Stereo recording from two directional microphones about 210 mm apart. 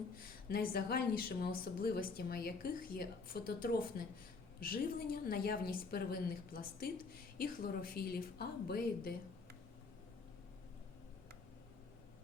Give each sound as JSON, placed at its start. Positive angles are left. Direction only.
{"t": 0.4, "sound": "speech", "side_deg": 45}